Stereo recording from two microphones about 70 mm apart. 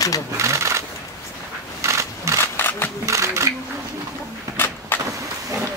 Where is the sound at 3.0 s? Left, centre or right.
Right.